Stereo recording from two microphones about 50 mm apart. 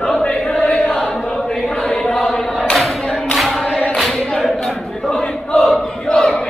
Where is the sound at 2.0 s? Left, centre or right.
Centre.